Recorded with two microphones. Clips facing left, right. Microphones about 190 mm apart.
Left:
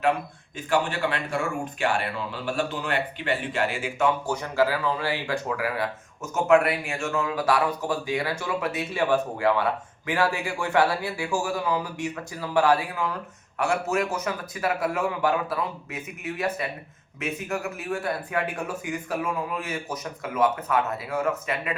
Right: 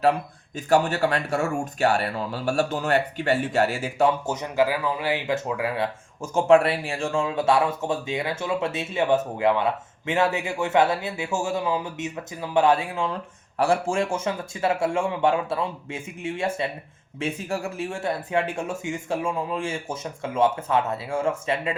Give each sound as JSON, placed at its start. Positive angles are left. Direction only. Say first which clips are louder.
{"t": 0.5, "sound": "speech", "louder": "right 4 dB", "side_deg": -40}
{"t": 4.3, "sound": "speech", "louder": "right 1 dB", "side_deg": -20}